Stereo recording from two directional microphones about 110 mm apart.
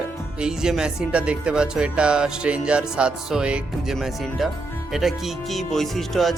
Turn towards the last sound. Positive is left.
turn(degrees=0)  # may be behind; listen again after turning